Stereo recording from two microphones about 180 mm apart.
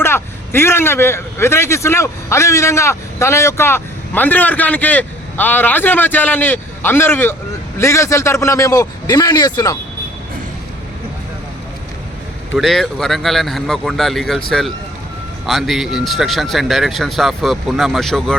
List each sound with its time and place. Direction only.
0.0 s a man's voice: 15° left (ahead or behind)
12.5 s speech: centre (ahead or behind)
15.4 s speech: centre (ahead or behind)